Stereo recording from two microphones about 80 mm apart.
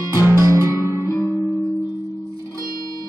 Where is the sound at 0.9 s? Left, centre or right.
Left.